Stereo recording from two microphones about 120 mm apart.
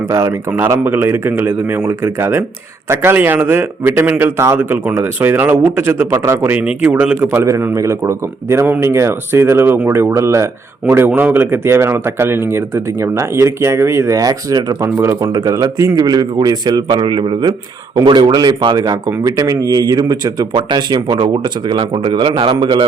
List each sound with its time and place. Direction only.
0.1 s a man's voice: 25° right (ahead or behind); by 22.8 s 45° right (ahead or behind)